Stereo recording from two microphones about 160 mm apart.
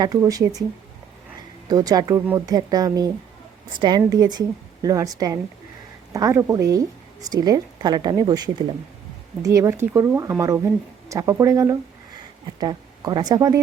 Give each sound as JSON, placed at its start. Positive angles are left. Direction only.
{"t": 0.0, "sound": "a woman's voice", "side_deg": -20}
{"t": 1.7, "sound": "a woman's voice", "side_deg": -25}